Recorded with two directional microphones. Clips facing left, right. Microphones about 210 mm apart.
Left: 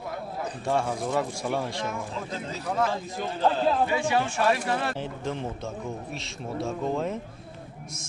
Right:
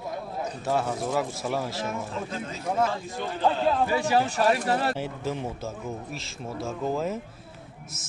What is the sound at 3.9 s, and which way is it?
Speech, 40° right (ahead or behind).